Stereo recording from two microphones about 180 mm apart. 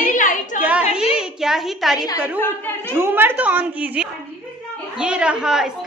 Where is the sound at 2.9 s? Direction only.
10° right (ahead or behind).